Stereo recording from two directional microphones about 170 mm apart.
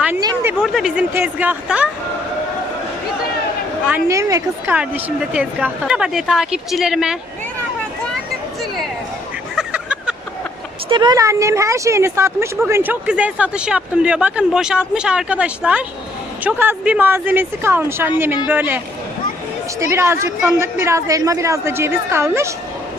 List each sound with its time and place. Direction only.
0.6 s speech: centre (ahead or behind)
3.8 s a woman's voice: 15° right (ahead or behind)
9.6 s a sound: 5° right (ahead or behind)
10.8 s speech: 25° right (ahead or behind); by 18.8 s 10° right (ahead or behind)
19.8 s speech: 15° right (ahead or behind)